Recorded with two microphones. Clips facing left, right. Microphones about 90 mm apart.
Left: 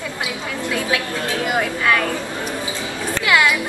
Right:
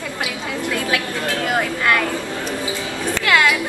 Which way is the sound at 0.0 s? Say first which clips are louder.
Even; 20° left (ahead or behind).